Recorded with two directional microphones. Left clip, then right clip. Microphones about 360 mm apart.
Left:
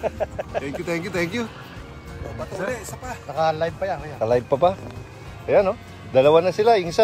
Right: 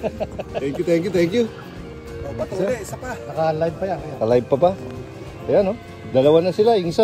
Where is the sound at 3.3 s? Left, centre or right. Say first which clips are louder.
Right 1 dB; left.